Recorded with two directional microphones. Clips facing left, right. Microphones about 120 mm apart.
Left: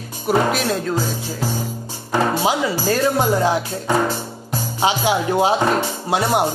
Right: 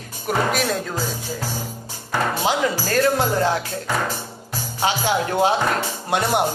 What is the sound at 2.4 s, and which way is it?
Speech, 10° left (ahead or behind).